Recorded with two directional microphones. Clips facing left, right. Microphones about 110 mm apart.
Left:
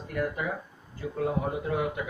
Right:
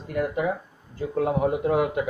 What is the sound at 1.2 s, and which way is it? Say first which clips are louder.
Speech: right 6 dB; 75° right (ahead or behind).